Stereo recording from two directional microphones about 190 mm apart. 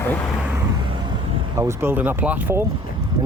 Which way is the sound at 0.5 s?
20° right (ahead or behind).